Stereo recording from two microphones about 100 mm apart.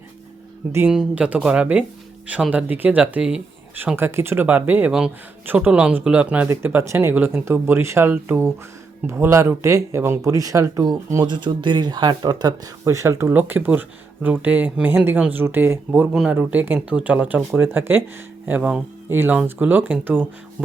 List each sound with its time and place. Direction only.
0.9 s speech: 10° right (ahead or behind)
3.9 s speech: 25° right (ahead or behind)
4.9 s speech: 5° right (ahead or behind); by 12.5 s 45° right (ahead or behind)
12.8 s speech: 30° right (ahead or behind)
16.1 s speech: 10° right (ahead or behind)